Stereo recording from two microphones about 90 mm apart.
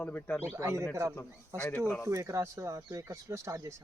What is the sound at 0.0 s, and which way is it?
Speech, 15° left (ahead or behind).